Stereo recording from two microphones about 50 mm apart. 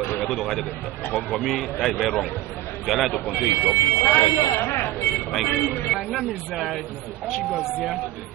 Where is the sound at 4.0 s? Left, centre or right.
Left.